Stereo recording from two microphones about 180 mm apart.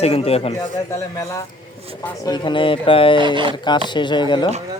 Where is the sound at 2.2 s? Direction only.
25° left (ahead or behind).